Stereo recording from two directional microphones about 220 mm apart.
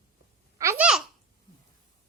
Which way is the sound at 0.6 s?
10° right (ahead or behind).